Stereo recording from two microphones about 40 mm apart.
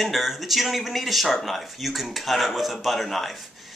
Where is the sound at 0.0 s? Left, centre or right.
Centre.